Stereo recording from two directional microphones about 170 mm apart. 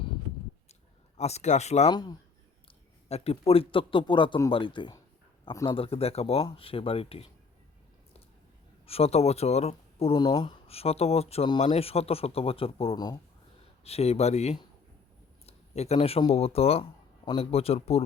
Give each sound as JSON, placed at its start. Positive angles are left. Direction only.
{"t": 1.1, "sound": "speech", "side_deg": 40}
{"t": 1.9, "sound": "speech", "side_deg": 25}
{"t": 3.1, "sound": "speech", "side_deg": 40}
{"t": 8.9, "sound": "speech", "side_deg": 35}